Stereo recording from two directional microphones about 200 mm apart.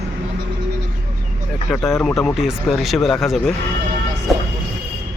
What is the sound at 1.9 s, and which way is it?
Speech, centre (ahead or behind).